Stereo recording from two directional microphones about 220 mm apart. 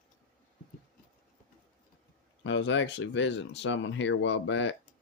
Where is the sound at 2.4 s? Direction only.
60° left (ahead or behind).